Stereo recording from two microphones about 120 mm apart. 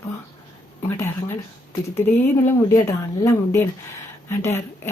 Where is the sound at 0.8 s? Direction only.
20° left (ahead or behind).